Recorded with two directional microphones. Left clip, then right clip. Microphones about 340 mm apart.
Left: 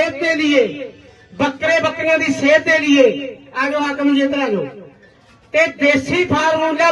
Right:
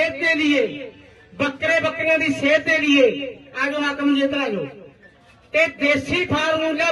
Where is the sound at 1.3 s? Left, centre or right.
Left.